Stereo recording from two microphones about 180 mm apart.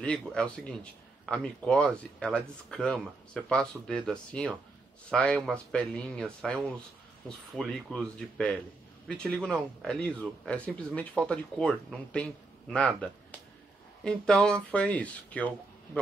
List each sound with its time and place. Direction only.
0.0 s a man's voice: 5° left (ahead or behind)